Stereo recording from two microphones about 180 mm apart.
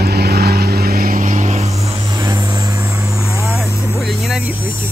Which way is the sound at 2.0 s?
20° right (ahead or behind).